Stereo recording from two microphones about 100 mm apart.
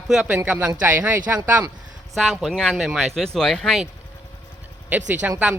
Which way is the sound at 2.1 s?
Centre (ahead or behind).